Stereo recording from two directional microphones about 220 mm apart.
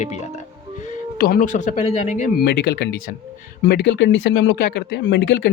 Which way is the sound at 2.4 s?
50° left (ahead or behind).